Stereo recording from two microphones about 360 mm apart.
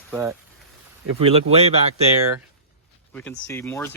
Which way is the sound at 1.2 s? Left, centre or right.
Centre.